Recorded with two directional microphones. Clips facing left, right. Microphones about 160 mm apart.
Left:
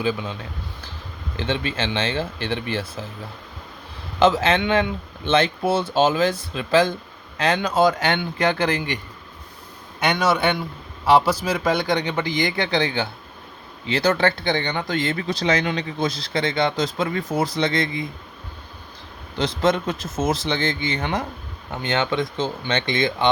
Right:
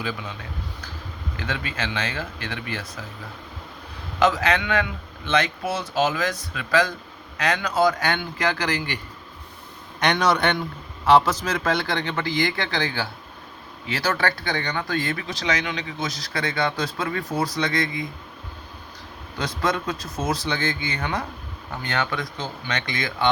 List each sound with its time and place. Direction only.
0.0 s speech: 25° left (ahead or behind)
1.4 s speech: 25° left (ahead or behind)
4.2 s speech: 25° left (ahead or behind)
10.0 s speech: 5° left (ahead or behind); by 18.0 s 30° left (ahead or behind)
19.4 s speech: 25° left (ahead or behind)